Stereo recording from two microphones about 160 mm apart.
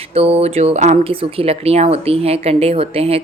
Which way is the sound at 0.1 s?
40° right (ahead or behind).